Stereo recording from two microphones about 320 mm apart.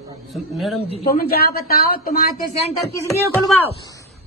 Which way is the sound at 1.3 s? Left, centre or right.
Left.